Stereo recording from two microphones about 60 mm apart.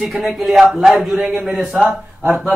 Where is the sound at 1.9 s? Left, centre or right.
Right.